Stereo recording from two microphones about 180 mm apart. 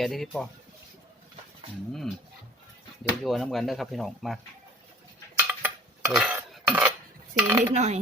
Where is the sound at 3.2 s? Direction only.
Centre (ahead or behind).